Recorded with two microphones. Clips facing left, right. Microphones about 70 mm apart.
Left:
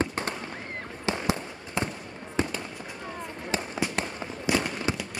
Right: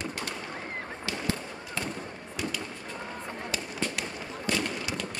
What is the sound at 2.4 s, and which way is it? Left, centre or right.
Fireworks, left.